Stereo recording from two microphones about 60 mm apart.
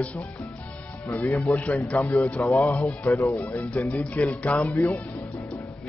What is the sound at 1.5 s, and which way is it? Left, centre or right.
Speech, centre.